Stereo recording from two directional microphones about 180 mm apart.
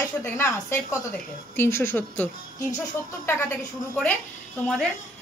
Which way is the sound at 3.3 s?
10° left (ahead or behind).